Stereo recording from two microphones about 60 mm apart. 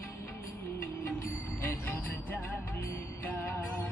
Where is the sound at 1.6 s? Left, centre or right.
Left.